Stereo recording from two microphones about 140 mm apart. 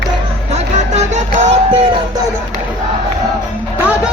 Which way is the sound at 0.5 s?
55° right (ahead or behind).